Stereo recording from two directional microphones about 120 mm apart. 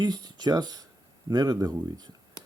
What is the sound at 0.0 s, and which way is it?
Speech, 35° right (ahead or behind).